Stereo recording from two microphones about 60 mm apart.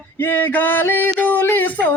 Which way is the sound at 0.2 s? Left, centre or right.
Left.